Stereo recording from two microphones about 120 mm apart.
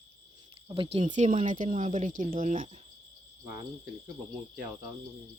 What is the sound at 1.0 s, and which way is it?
Speech, 85° right.